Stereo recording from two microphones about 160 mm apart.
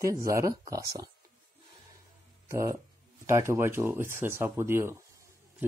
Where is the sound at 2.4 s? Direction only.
20° right (ahead or behind).